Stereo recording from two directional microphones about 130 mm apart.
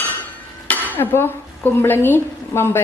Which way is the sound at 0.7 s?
15° left (ahead or behind).